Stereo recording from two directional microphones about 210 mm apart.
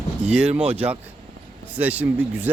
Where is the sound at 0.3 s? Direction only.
5° right (ahead or behind).